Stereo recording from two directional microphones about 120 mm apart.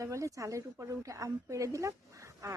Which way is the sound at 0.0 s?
25° right (ahead or behind).